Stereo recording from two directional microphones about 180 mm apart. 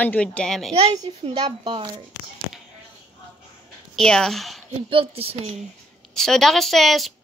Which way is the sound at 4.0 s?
5° left (ahead or behind).